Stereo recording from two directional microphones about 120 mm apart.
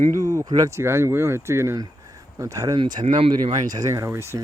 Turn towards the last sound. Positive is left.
turn(degrees=-20)  # may be behind; listen again after turning